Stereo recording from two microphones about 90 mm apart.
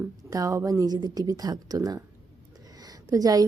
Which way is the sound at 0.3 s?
40° right (ahead or behind).